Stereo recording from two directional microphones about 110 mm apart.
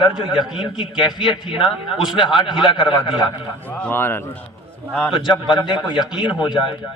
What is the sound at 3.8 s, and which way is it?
Speech, 15° left (ahead or behind).